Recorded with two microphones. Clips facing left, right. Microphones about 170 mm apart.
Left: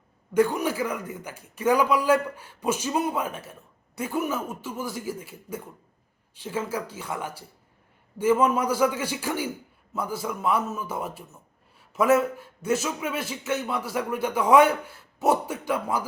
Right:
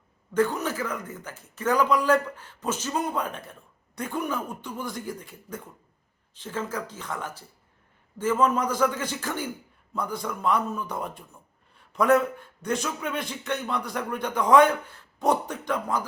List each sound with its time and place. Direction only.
0.3 s a man's voice: 10° left (ahead or behind)